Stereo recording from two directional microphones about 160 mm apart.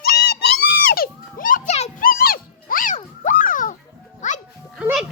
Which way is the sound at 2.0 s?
65° left (ahead or behind).